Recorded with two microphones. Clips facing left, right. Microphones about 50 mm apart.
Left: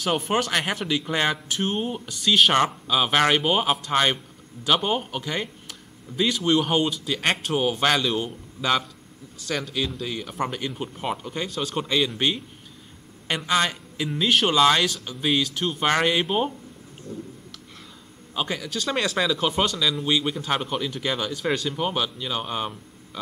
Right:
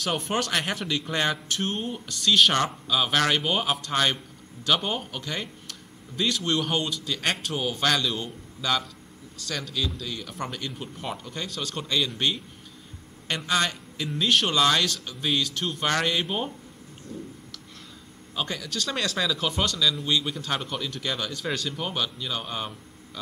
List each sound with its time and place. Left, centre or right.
0.0 s speech: centre
9.8 s speech: left; by 15.8 s centre
15.8 s speech: centre
17.1 s speech: left
18.3 s speech: centre